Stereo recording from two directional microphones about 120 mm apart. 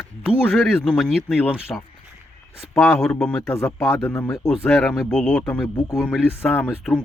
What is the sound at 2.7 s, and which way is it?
Speech, 5° left (ahead or behind).